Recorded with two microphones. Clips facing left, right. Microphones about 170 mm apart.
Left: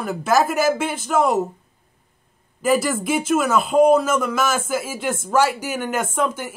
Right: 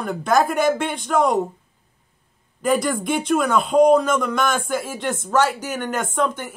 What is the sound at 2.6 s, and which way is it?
Speech, 5° left (ahead or behind).